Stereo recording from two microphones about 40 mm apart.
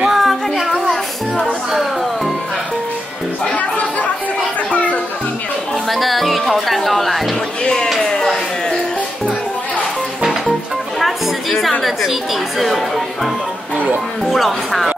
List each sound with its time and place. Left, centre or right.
0.1 s music: centre
3.5 s chatter: left
5.9 s music: centre
7.6 s a sound: centre
11.0 s music: centre
11.8 s speech: centre